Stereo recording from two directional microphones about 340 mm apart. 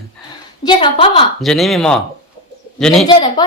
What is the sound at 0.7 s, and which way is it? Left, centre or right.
Speech, centre.